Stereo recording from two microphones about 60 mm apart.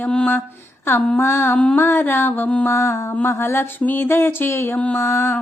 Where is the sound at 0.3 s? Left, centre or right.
Left.